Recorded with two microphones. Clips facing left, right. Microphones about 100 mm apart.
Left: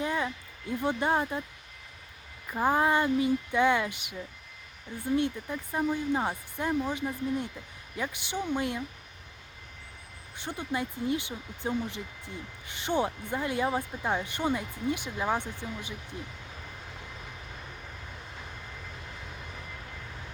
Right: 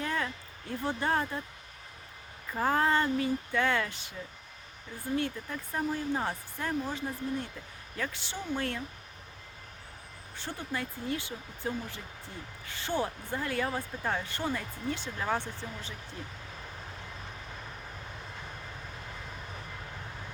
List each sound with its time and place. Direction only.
0.0 s a sound: 15° left (ahead or behind)
0.8 s speech: 20° left (ahead or behind)
2.5 s speech: 15° left (ahead or behind)
10.3 s speech: 15° left (ahead or behind)